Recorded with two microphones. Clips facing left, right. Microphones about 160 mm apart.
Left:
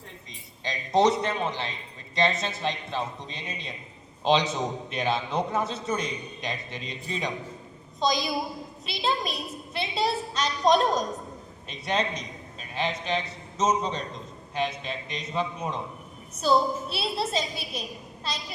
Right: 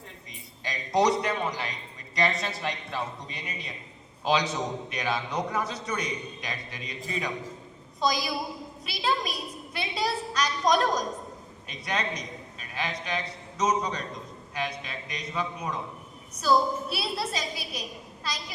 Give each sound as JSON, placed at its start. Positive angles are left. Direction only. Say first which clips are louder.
{"t": 0.6, "sound": "a man's voice", "louder": "left 2 dB", "side_deg": 25}